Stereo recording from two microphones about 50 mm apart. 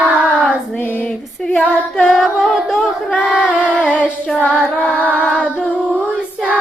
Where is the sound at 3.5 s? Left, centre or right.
Left.